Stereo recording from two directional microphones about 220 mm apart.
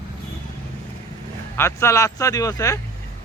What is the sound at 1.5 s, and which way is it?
Speech, 10° left (ahead or behind).